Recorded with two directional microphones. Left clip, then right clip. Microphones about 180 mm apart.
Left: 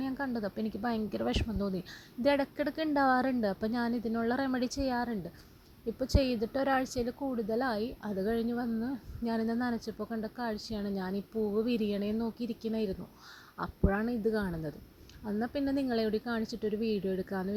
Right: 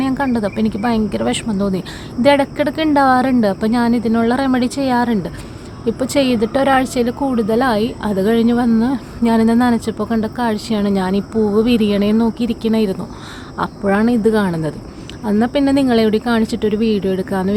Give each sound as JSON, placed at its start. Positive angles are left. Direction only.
{"t": 0.0, "sound": "a woman's voice", "side_deg": 35}